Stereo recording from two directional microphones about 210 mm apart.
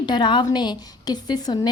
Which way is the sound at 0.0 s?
20° left (ahead or behind).